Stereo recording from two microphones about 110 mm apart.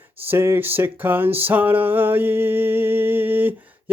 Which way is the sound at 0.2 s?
20° right (ahead or behind).